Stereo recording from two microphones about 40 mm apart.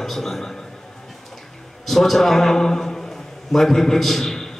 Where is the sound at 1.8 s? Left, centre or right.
Centre.